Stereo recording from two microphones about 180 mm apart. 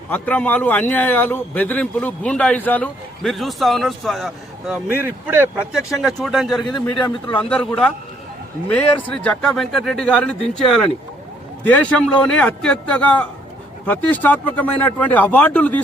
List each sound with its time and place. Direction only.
0.1 s a man's voice: 10° left (ahead or behind)
6.7 s a man's voice: 25° left (ahead or behind)
7.3 s a man's voice: 5° left (ahead or behind)